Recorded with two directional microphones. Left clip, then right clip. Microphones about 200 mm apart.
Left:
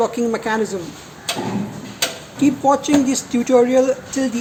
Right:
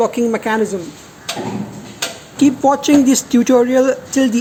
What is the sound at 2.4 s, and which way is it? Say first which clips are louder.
Speech: right 3 dB; 25° right (ahead or behind).